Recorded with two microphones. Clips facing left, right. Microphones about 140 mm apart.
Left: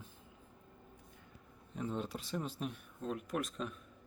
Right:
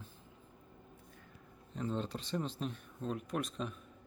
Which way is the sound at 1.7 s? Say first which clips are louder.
Right 1 dB; 10° left (ahead or behind).